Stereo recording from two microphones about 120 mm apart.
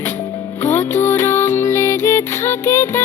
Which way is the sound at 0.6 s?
20° left (ahead or behind).